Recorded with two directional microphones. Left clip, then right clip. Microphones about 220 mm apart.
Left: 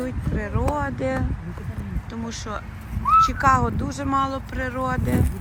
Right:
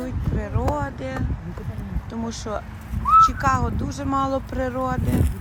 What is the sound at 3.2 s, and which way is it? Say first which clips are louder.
Speech: even; 10° right (ahead or behind).